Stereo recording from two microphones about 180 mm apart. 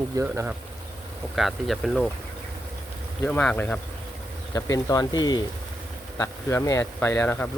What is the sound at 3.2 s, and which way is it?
Speech, 10° left (ahead or behind).